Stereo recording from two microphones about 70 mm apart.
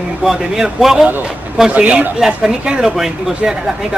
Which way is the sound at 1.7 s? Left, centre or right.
Centre.